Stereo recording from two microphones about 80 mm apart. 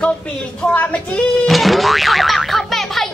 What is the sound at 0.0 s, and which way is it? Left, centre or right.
Speech, centre.